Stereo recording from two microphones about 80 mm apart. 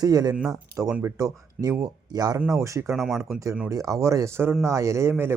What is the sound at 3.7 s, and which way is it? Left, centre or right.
Speech, right.